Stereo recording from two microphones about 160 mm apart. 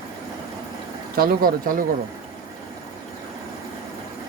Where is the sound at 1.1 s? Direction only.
65° right (ahead or behind).